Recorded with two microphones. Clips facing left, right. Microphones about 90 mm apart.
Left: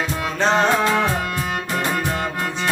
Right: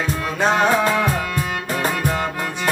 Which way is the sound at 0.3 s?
10° right (ahead or behind).